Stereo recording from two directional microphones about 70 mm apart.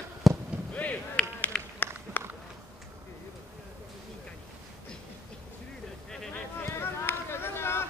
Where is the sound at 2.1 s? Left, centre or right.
Left.